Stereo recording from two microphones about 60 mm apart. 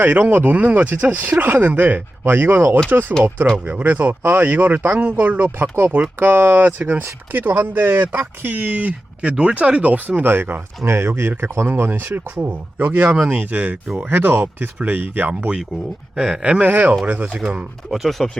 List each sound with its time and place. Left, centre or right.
0.0 s speech: right
15.3 s speech: centre
17.9 s speech: centre